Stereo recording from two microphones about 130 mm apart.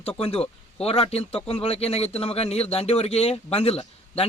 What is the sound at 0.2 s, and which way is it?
Speech, 50° left (ahead or behind).